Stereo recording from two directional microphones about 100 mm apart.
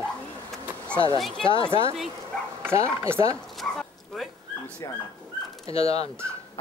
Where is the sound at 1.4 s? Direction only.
55° left (ahead or behind).